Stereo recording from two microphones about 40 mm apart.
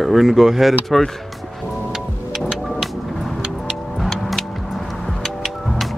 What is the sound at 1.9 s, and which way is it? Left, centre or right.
Music, centre.